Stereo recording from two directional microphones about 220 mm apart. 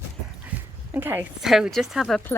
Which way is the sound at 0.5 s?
5° right (ahead or behind).